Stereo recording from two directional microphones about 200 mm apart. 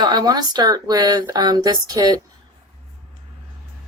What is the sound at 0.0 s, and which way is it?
Speech, 20° right (ahead or behind).